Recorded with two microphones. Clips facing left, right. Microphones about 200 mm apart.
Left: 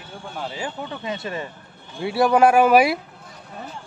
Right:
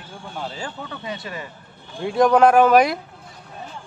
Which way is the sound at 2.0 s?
5° left (ahead or behind).